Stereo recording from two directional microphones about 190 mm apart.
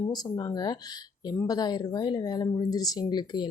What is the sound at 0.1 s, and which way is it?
Speech, 20° left (ahead or behind).